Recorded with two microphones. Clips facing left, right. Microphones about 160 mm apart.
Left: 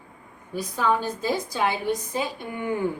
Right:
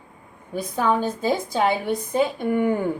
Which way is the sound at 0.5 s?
50° right (ahead or behind).